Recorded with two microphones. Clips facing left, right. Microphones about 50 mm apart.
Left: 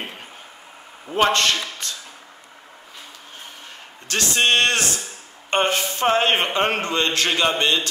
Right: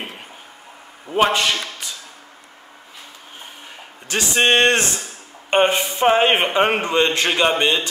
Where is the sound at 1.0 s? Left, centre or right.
Centre.